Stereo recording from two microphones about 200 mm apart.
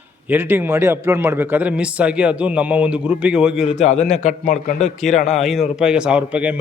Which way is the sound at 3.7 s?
35° left (ahead or behind).